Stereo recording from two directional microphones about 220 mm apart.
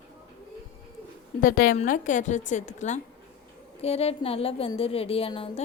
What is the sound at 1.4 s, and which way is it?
A woman's voice, 40° left (ahead or behind).